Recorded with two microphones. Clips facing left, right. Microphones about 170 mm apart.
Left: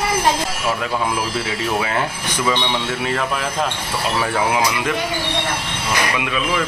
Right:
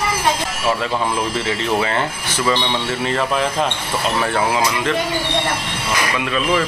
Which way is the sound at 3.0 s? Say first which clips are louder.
Right 6 dB; centre (ahead or behind).